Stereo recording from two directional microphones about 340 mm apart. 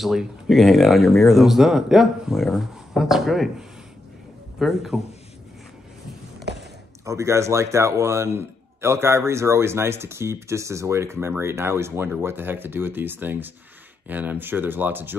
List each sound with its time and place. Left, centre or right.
0.0 s speech: centre
6.5 s a sound: right
7.1 s speech: centre